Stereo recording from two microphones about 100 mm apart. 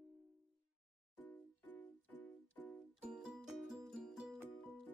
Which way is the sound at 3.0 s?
5° right (ahead or behind).